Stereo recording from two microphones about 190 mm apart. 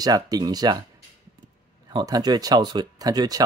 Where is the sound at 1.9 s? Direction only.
20° right (ahead or behind).